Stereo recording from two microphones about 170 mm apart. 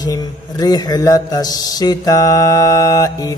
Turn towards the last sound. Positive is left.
turn(degrees=20)  # may be behind; listen again after turning